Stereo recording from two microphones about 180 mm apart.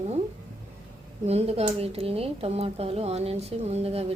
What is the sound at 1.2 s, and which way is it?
Speech, 35° right (ahead or behind).